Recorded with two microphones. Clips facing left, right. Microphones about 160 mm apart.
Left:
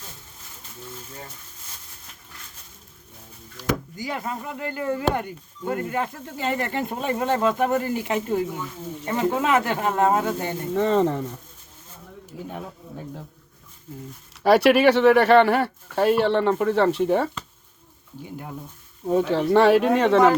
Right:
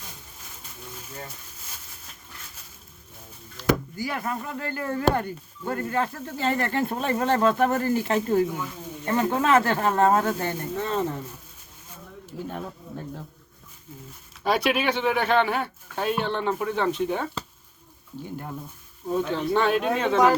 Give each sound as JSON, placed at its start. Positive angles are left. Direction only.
{"t": 3.6, "sound": "speech", "side_deg": 20}
{"t": 10.8, "sound": "speech", "side_deg": 90}
{"t": 12.2, "sound": "speech", "side_deg": 15}
{"t": 14.4, "sound": "speech", "side_deg": 70}
{"t": 18.2, "sound": "speech", "side_deg": 10}
{"t": 19.3, "sound": "speech", "side_deg": 75}